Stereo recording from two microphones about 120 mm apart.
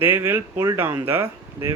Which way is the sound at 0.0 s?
15° right (ahead or behind).